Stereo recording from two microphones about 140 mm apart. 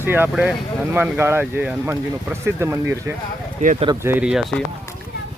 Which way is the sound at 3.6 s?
60° right (ahead or behind).